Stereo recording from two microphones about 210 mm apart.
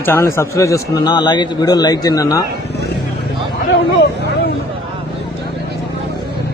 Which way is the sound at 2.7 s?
50° left (ahead or behind).